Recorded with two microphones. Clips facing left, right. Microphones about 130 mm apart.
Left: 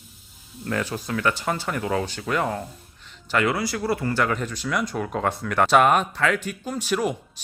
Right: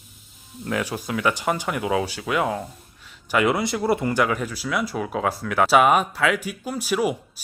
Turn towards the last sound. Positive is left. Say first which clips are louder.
# right 1 dB
turn(degrees=-10)  # may be behind; listen again after turning